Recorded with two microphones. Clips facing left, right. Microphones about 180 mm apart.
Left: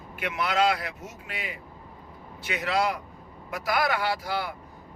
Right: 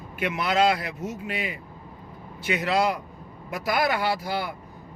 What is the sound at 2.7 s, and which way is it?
Speech, 30° right (ahead or behind).